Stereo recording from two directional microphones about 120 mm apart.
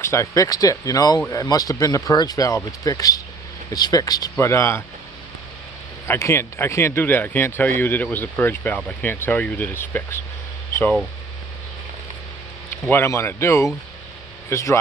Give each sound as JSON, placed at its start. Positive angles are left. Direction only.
{"t": 0.0, "sound": "speech", "side_deg": 25}
{"t": 6.0, "sound": "speech", "side_deg": 20}
{"t": 12.8, "sound": "speech", "side_deg": 20}